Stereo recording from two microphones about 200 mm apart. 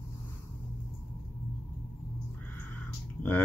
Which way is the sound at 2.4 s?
10° left (ahead or behind).